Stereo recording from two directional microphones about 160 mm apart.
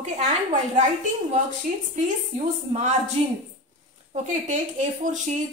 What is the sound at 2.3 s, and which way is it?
A woman's voice, 45° right (ahead or behind).